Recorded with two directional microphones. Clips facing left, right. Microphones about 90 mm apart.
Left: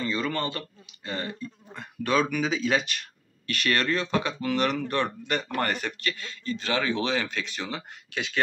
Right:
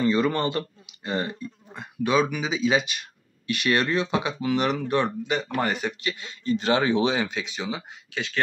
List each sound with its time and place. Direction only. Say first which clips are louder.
0.0 s speech: right 6 dB; 25° right (ahead or behind)
1.7 s speech: right 3 dB; 5° right (ahead or behind)
6.4 s speech: right 6 dB; 30° right (ahead or behind)
7.2 s speech: right 2 dB; 5° right (ahead or behind)